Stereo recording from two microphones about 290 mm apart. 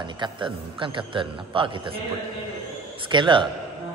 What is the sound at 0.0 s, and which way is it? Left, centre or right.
A man's voice, centre.